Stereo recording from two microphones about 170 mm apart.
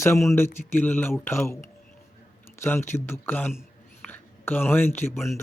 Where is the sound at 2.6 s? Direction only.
15° left (ahead or behind).